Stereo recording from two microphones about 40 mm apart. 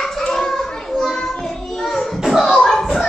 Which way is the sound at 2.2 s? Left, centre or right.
Centre.